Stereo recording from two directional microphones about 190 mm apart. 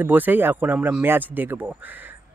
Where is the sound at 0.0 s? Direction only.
10° right (ahead or behind).